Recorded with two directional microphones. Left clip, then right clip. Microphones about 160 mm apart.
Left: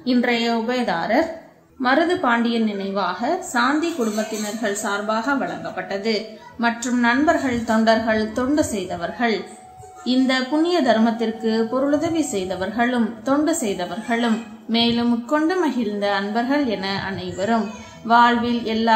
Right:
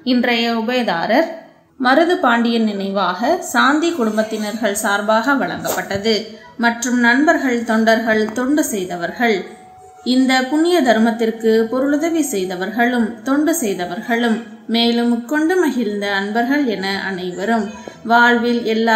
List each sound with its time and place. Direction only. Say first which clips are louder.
0.0 s a woman's voice: right 3 dB; 25° right (ahead or behind)